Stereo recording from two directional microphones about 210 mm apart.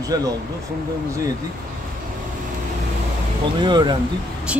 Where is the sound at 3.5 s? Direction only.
20° right (ahead or behind).